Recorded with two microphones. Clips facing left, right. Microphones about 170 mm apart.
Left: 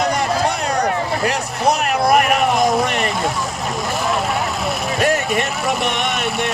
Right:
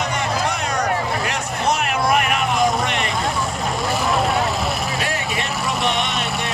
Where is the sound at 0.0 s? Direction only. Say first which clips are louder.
Left 4 dB; 35° left (ahead or behind).